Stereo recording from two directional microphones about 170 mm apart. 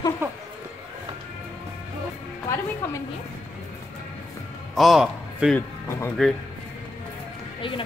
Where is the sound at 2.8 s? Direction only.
15° left (ahead or behind).